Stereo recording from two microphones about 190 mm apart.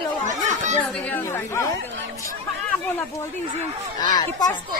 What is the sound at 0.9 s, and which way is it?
Speech, 10° left (ahead or behind).